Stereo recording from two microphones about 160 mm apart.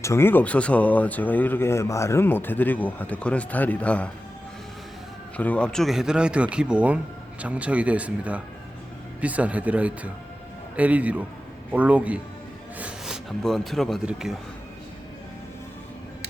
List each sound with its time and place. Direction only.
0.0 s speech: 15° left (ahead or behind)
5.4 s a man's voice: 10° left (ahead or behind)